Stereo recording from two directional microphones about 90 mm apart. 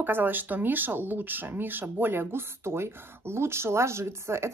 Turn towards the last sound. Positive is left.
turn(degrees=-30)  # may be behind; listen again after turning